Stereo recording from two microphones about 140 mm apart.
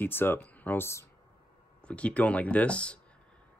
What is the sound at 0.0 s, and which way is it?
Speech, 15° left (ahead or behind).